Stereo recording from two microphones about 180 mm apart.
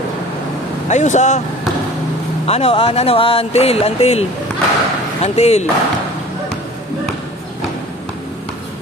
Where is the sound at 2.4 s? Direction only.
35° left (ahead or behind).